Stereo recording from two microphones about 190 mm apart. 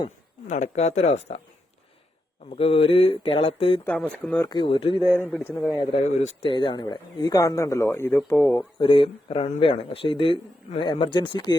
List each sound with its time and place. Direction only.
0.4 s speech: 40° left (ahead or behind)
2.5 s speech: 30° left (ahead or behind)
3.8 s speech: 5° left (ahead or behind)
4.4 s speech: 25° left (ahead or behind)
5.2 s speech: 10° left (ahead or behind)
5.9 s speech: 35° left (ahead or behind)
6.5 s speech: 25° left (ahead or behind)
8.8 s speech: 25° left (ahead or behind)